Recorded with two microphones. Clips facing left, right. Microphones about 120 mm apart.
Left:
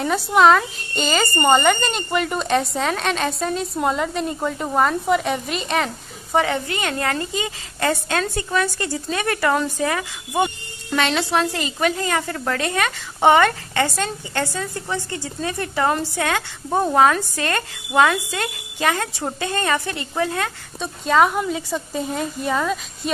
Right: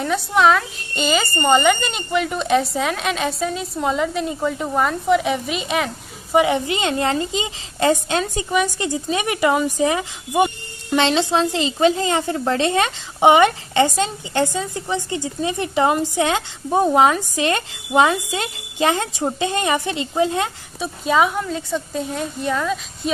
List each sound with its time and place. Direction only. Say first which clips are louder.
0.0 s speech: left 1 dB; centre (ahead or behind)
6.3 s a woman's voice: right 3 dB; 15° right (ahead or behind)
20.8 s speech: left 1 dB; 5° right (ahead or behind)